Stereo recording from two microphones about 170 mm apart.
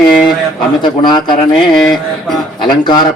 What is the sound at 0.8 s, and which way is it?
Speech, 25° left (ahead or behind).